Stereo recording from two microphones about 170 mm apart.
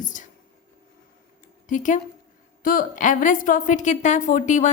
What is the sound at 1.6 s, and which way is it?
A woman's voice, 50° left (ahead or behind).